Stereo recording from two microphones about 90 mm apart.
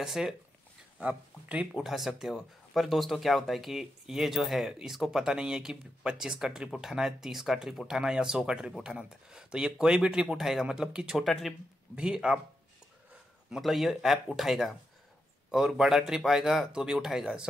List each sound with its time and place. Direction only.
0.0 s speech: 5° right (ahead or behind)
1.7 s speech: centre (ahead or behind)
11.9 s speech: 10° right (ahead or behind)
13.5 s speech: centre (ahead or behind)